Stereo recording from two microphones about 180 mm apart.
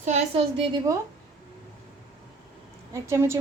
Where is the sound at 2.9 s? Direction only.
15° right (ahead or behind).